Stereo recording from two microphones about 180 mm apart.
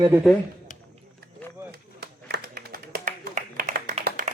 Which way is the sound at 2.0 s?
60° right (ahead or behind).